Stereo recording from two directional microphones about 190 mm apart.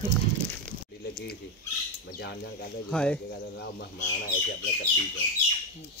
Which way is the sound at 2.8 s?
5° left (ahead or behind).